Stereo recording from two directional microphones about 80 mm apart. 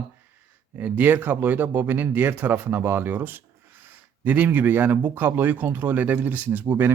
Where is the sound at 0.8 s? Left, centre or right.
Right.